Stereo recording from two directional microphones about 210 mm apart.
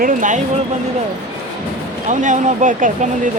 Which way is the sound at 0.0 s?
40° right (ahead or behind).